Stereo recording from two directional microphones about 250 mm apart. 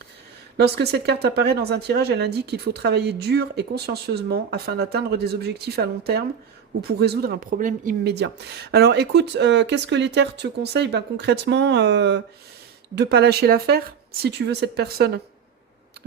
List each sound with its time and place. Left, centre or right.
0.5 s speech: right